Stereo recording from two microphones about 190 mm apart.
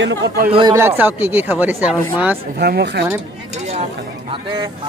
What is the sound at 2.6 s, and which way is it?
Speech, 60° right (ahead or behind).